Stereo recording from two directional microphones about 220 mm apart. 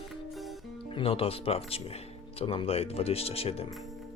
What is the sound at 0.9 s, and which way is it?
Speech, 25° left (ahead or behind).